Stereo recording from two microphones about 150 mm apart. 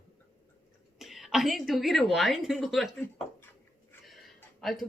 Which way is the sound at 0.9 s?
Centre (ahead or behind).